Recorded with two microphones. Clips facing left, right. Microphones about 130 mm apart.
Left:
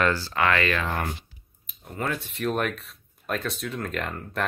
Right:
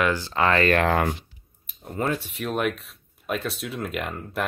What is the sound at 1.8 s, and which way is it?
Speech, 30° right (ahead or behind).